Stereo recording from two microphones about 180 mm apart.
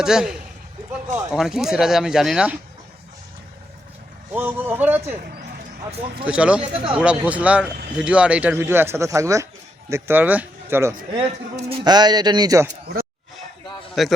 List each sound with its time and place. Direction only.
0.0 s speech: 5° right (ahead or behind)
4.3 s speech: 10° right (ahead or behind)
6.2 s speech: 5° right (ahead or behind)
11.7 s speech: 25° right (ahead or behind)
14.0 s speech: centre (ahead or behind)